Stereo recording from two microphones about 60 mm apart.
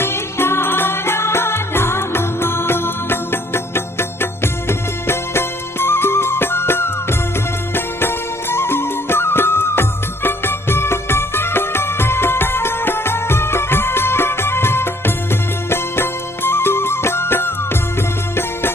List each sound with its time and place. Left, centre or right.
0.0 s music: left